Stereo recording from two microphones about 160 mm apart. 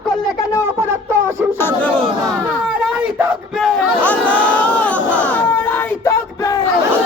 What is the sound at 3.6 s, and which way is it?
Baby cry, centre (ahead or behind).